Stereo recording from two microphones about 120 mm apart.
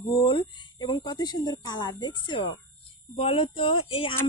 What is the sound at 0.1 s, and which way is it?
A woman's voice, 45° left (ahead or behind).